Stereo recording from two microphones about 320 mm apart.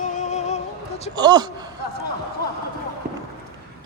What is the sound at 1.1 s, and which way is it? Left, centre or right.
Speech, centre.